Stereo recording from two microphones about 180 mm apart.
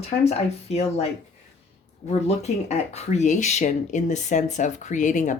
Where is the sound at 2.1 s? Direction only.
40° left (ahead or behind).